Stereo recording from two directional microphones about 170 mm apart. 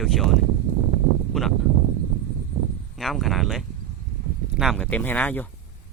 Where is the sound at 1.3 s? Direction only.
Centre (ahead or behind).